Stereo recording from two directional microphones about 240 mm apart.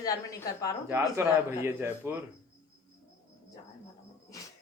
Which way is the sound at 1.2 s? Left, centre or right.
Centre.